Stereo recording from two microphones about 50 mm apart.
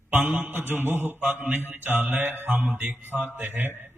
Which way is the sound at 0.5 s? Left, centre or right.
Right.